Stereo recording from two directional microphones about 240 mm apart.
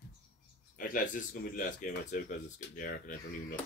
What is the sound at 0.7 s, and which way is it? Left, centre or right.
Speech, left.